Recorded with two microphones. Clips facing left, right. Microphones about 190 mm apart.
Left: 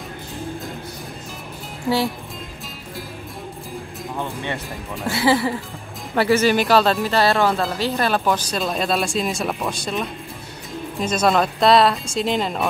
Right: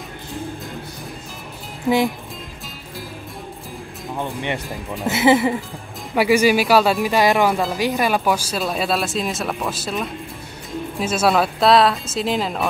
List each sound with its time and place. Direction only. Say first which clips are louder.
4.2 s speech: right 3 dB; 20° right (ahead or behind); by 12.6 s centre (ahead or behind)